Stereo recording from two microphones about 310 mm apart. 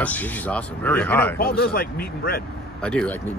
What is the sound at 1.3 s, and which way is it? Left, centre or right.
Speech, left.